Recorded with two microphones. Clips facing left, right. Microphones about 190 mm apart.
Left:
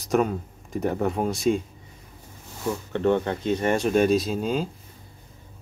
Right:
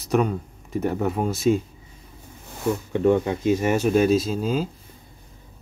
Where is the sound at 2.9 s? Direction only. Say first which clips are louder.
Right 2 dB; 10° right (ahead or behind).